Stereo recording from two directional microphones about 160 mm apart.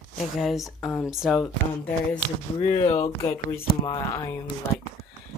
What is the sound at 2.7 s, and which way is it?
Speech, 40° left (ahead or behind).